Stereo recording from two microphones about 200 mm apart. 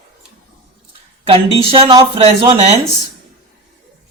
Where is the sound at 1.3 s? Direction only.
25° right (ahead or behind).